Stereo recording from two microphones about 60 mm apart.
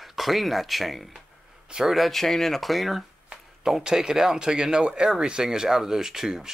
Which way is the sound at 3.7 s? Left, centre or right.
Centre.